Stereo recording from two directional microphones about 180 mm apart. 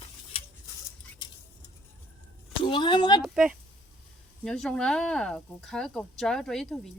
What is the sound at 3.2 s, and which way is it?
Speech, 5° right (ahead or behind).